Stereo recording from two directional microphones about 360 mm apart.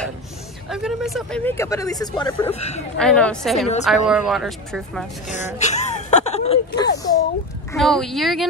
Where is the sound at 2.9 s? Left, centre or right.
Centre.